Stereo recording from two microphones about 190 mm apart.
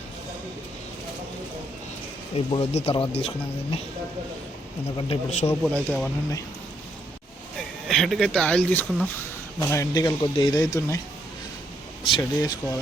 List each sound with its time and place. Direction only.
2.3 s speech: 30° left (ahead or behind)
4.9 s speech: 30° left (ahead or behind)
5.5 s speech: 5° left (ahead or behind)
7.9 s speech: centre (ahead or behind); by 11.0 s 15° left (ahead or behind)
12.0 s speech: 25° left (ahead or behind)